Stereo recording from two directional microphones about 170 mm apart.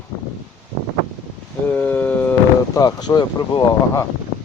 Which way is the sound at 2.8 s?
20° left (ahead or behind).